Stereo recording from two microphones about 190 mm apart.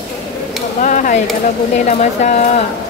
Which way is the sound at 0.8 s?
45° left (ahead or behind).